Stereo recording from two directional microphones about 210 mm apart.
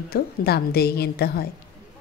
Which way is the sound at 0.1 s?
45° left (ahead or behind).